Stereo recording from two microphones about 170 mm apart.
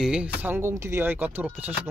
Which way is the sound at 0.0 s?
5° right (ahead or behind).